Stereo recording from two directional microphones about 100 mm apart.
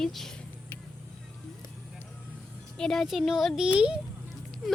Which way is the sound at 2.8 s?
5° left (ahead or behind).